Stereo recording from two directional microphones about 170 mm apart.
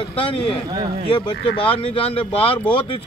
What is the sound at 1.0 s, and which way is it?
Speech, 30° left (ahead or behind).